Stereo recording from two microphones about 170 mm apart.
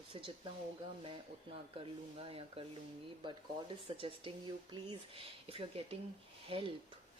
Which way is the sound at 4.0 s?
30° right (ahead or behind).